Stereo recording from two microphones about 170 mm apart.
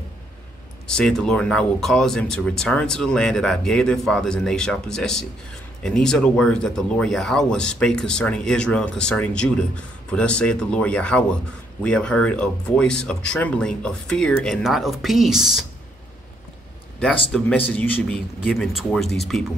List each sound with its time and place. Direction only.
0.8 s speech: 5° left (ahead or behind)
17.3 s speech: 5° left (ahead or behind)